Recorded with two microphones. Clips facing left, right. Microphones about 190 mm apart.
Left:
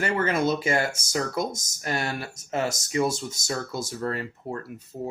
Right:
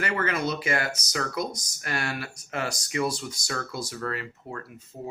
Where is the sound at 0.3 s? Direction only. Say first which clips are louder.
Left 4 dB; 50° left (ahead or behind).